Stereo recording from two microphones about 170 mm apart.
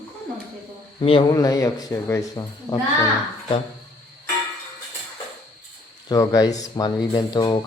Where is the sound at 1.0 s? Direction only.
30° left (ahead or behind).